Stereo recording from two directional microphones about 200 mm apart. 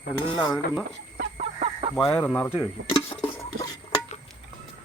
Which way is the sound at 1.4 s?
30° right (ahead or behind).